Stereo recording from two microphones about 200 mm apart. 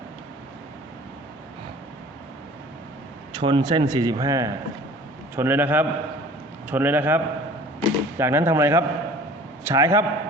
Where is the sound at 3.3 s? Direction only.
20° right (ahead or behind).